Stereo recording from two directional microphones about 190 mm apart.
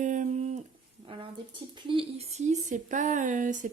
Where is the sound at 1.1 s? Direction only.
30° right (ahead or behind).